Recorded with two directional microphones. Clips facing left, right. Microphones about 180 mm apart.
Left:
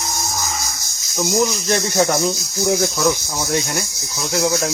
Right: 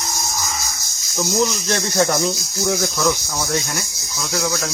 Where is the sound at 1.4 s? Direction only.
10° left (ahead or behind).